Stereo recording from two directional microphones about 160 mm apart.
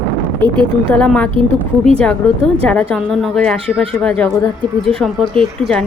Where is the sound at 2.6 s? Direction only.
5° left (ahead or behind).